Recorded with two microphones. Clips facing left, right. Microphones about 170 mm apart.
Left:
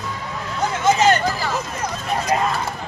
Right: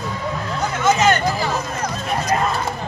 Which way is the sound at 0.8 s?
35° left (ahead or behind).